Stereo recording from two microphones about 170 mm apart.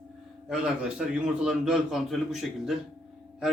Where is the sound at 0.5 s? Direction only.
5° right (ahead or behind).